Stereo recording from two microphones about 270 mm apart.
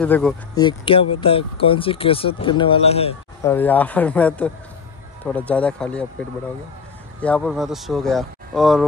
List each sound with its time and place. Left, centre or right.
0.0 s speech: centre
0.6 s speech: centre
3.4 s speech: centre
7.2 s speech: centre